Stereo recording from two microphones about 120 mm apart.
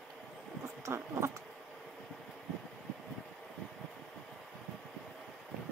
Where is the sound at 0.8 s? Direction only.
25° right (ahead or behind).